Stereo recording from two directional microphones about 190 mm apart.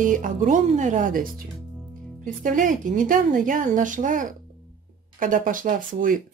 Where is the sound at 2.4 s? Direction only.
45° right (ahead or behind).